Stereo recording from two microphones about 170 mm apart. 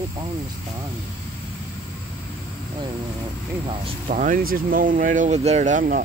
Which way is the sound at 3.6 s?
35° right (ahead or behind).